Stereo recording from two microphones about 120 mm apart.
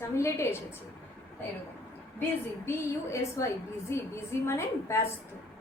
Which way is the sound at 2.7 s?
25° left (ahead or behind).